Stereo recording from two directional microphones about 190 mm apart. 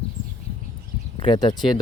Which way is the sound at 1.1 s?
25° left (ahead or behind).